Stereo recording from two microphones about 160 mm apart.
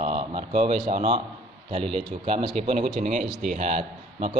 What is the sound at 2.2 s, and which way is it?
A man's voice, 35° right (ahead or behind).